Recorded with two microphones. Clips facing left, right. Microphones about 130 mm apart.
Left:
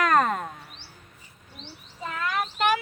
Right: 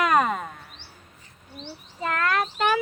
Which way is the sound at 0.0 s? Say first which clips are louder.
Even; 5° right (ahead or behind).